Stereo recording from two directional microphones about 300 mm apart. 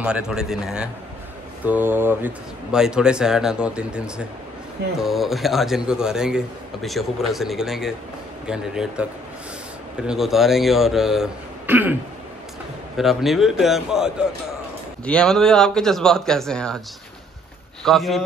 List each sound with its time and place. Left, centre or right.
0.0 s a man's voice: centre
10.0 s a man's voice: centre
12.9 s a man's voice: centre
17.8 s a man's voice: centre